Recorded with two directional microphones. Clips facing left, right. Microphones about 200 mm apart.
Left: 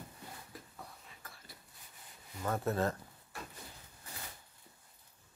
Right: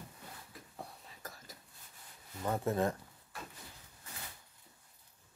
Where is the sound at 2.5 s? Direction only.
15° right (ahead or behind).